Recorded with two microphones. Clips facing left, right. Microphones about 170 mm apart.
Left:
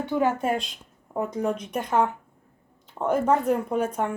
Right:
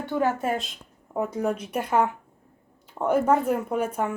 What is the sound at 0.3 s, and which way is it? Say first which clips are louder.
Speech: left 1 dB; centre (ahead or behind).